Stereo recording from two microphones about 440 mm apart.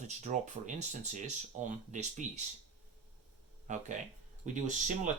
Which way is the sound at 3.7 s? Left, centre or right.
Centre.